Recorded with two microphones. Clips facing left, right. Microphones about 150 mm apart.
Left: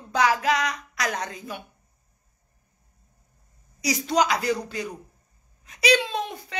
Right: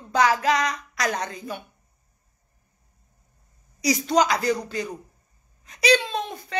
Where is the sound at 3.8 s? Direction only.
5° left (ahead or behind).